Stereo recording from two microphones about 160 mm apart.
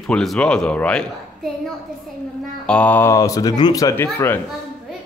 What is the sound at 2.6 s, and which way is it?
Speech, 10° left (ahead or behind).